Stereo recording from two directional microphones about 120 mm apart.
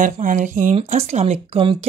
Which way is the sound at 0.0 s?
90° right.